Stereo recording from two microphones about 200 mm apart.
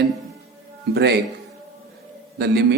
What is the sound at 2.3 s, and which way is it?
Speech, 55° right (ahead or behind).